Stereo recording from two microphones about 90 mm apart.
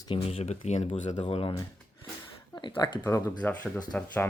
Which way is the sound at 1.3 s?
90° left.